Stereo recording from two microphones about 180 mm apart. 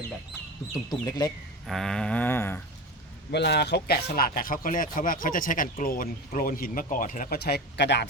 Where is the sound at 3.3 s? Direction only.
70° left (ahead or behind).